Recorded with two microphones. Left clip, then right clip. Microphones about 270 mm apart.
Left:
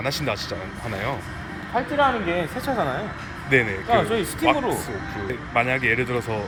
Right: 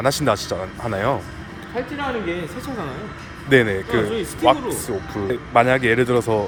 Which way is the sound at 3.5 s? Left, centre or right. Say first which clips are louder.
Right 4 dB; right.